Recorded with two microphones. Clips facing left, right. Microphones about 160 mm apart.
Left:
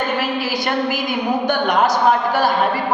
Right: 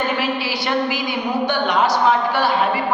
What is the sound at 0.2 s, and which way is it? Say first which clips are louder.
A woman's voice: left 1 dB; 45° left (ahead or behind).